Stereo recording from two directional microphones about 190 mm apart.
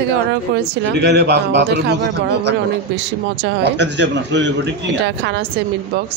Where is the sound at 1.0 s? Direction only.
60° right (ahead or behind).